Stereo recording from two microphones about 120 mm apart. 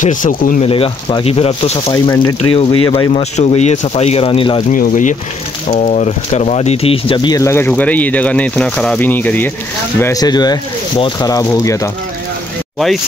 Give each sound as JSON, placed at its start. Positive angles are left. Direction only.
{"t": 0.0, "sound": "speech", "side_deg": 90}
{"t": 0.7, "sound": "speech", "side_deg": 50}
{"t": 1.9, "sound": "speech", "side_deg": 30}
{"t": 2.5, "sound": "speech", "side_deg": 50}
{"t": 3.1, "sound": "speech", "side_deg": 70}
{"t": 5.7, "sound": "speech", "side_deg": 80}
{"t": 7.3, "sound": "speech", "side_deg": 20}
{"t": 10.1, "sound": "speech", "side_deg": 35}
{"t": 12.7, "sound": "speech", "side_deg": 0}